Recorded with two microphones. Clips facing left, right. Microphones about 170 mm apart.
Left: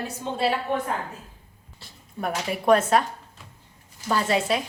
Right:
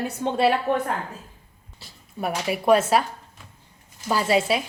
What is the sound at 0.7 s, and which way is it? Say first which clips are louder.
Speech: right 3 dB; 65° right (ahead or behind).